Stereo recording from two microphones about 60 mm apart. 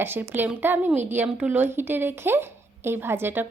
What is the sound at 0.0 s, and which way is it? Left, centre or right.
A woman's voice, right.